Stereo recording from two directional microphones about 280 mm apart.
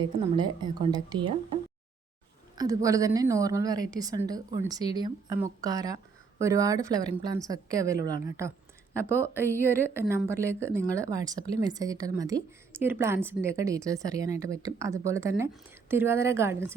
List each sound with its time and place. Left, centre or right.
0.0 s a woman's voice: centre
2.6 s a woman's voice: centre
9.0 s speech: centre
9.6 s a woman's voice: centre